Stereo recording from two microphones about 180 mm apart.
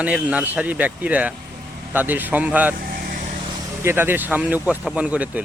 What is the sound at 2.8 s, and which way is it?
Vehicle, 55° right (ahead or behind).